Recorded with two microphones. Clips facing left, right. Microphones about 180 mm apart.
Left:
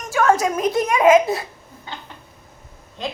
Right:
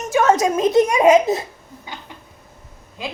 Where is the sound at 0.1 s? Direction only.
20° right (ahead or behind).